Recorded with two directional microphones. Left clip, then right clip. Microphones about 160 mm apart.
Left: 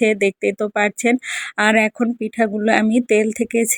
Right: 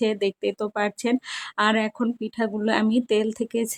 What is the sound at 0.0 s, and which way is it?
Speech, 25° left (ahead or behind).